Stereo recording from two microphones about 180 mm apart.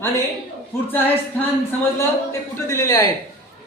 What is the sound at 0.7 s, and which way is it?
Speech, 15° left (ahead or behind).